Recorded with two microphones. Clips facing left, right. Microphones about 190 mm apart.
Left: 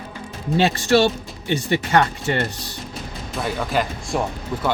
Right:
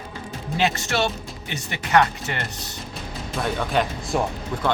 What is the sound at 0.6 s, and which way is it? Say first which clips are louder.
Speech: left 6 dB; 35° left (ahead or behind).